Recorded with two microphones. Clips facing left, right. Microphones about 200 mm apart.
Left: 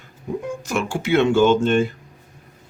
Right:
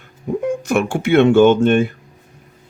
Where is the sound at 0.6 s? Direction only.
60° right (ahead or behind).